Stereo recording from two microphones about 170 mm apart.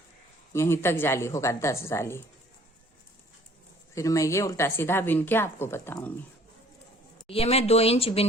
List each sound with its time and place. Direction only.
0.5 s speech: 15° left (ahead or behind)
3.9 s speech: 20° left (ahead or behind)
7.3 s speech: 35° left (ahead or behind)